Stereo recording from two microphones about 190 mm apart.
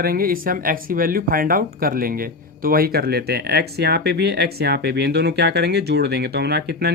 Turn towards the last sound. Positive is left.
turn(degrees=-60)  # may be behind; listen again after turning